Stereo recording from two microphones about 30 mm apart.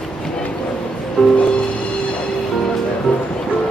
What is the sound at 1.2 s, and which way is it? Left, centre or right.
Music, centre.